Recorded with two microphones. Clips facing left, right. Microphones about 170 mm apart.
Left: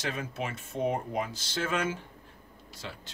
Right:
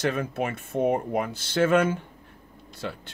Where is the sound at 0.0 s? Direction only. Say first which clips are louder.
Right 8 dB; 55° right (ahead or behind).